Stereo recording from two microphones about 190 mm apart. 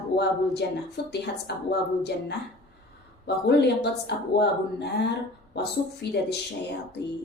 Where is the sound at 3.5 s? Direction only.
60° left (ahead or behind).